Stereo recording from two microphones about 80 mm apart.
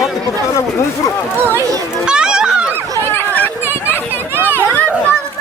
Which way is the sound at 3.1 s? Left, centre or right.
Left.